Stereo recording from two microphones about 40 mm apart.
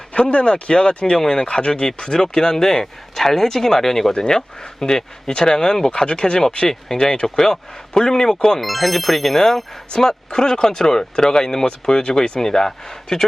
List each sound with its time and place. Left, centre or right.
0.1 s speech: left; by 8.6 s centre
8.6 s speech: centre